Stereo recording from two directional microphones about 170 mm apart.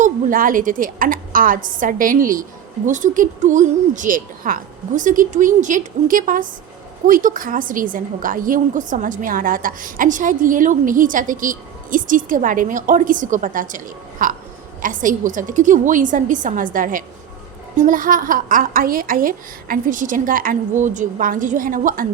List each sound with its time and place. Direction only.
0.0 s a woman's voice: 55° right (ahead or behind)